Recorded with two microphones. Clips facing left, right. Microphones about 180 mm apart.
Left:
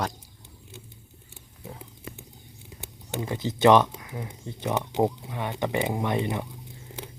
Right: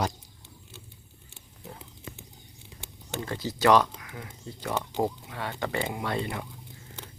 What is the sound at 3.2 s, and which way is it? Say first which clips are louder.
Speech: left 5 dB; 20° left (ahead or behind).